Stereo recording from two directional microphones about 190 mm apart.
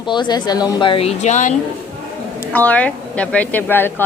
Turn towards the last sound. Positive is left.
turn(degrees=10)  # may be behind; listen again after turning